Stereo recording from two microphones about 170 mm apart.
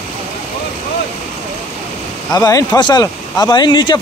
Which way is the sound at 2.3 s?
25° left (ahead or behind).